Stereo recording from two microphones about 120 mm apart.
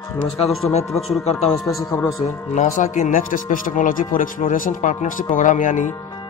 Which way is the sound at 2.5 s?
90° left.